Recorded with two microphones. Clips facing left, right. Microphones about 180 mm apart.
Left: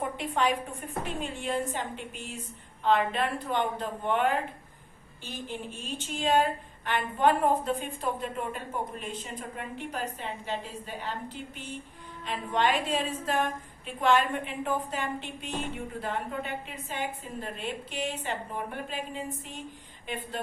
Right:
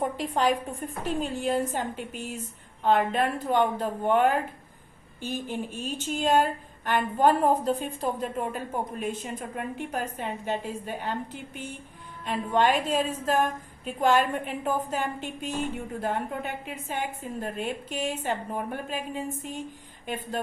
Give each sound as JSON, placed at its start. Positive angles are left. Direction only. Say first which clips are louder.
{"t": 0.2, "sound": "a woman's voice", "louder": "right 1 dB", "side_deg": -35}
{"t": 12.2, "sound": "a woman's voice", "louder": "right 4 dB", "side_deg": -45}